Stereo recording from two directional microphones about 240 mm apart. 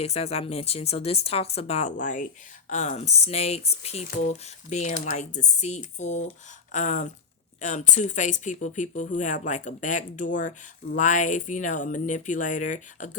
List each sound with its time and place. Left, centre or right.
0.0 s speech: left